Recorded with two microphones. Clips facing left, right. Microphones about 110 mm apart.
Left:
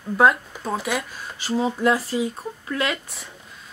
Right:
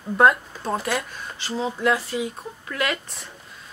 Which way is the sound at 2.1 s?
25° left (ahead or behind).